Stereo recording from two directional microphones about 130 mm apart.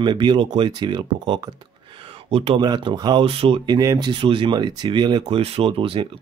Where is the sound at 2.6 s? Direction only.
35° right (ahead or behind).